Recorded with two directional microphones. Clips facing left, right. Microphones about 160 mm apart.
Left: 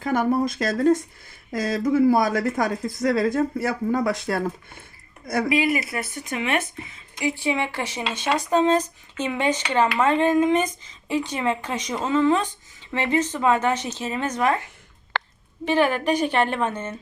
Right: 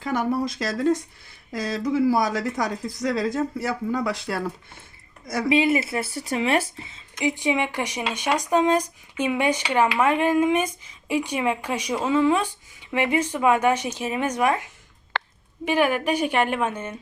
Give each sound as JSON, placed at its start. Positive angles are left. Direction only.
{"t": 0.0, "sound": "a woman's voice", "side_deg": 50}
{"t": 5.5, "sound": "speech", "side_deg": -25}
{"t": 15.1, "sound": "a sound", "side_deg": 85}
{"t": 15.6, "sound": "speech", "side_deg": -10}